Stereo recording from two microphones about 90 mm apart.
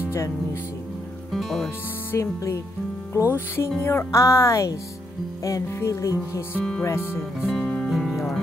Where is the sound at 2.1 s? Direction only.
35° left (ahead or behind).